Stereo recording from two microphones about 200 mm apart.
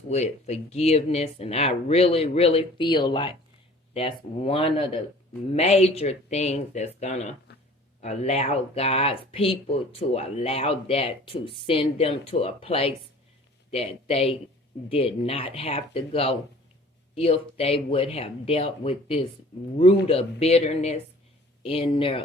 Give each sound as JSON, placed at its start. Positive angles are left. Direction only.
{"t": 0.1, "sound": "speech", "side_deg": 35}